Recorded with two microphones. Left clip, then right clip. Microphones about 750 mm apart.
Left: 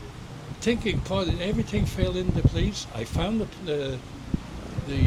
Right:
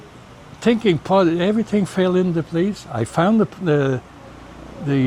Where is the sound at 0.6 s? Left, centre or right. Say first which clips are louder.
Right 9 dB; right.